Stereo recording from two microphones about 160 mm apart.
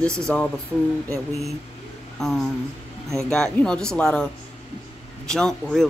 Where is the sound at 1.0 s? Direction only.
20° right (ahead or behind).